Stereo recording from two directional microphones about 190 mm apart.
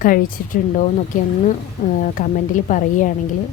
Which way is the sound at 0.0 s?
45° left (ahead or behind).